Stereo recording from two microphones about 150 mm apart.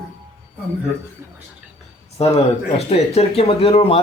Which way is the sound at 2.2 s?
45° left (ahead or behind).